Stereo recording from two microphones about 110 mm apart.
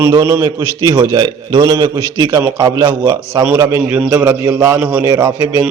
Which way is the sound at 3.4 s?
20° right (ahead or behind).